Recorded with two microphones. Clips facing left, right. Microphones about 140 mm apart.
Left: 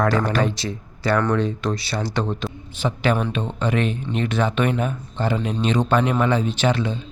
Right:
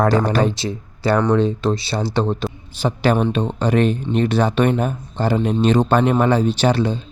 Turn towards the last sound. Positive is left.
turn(degrees=-35)  # may be behind; listen again after turning